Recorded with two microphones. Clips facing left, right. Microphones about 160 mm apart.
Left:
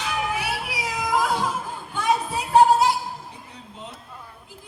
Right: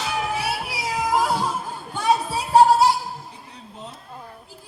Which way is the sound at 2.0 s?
35° right (ahead or behind).